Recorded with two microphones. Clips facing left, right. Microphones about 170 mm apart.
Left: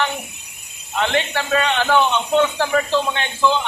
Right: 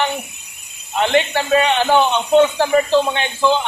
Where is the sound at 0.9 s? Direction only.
20° right (ahead or behind).